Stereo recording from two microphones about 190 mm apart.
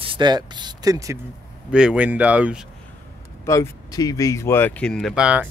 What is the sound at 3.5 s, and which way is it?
Speech, 15° left (ahead or behind).